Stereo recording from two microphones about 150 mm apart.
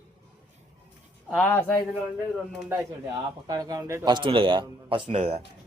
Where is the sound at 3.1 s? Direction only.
25° right (ahead or behind).